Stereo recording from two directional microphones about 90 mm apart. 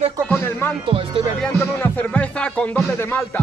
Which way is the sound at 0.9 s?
90° right.